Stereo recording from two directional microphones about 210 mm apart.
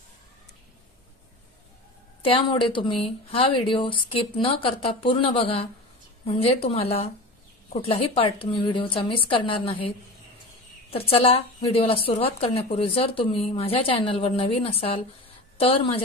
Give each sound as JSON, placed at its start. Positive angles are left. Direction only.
{"t": 2.2, "sound": "a woman's voice", "side_deg": 25}